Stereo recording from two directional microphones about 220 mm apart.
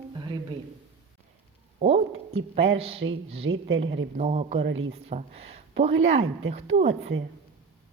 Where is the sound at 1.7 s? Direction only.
30° right (ahead or behind).